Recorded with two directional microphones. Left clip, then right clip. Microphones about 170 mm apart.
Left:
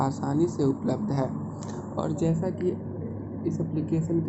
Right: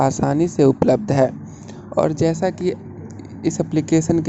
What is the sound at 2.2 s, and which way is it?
Speech, 55° right (ahead or behind).